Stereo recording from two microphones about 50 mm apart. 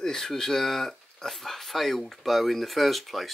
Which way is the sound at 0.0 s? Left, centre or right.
Centre.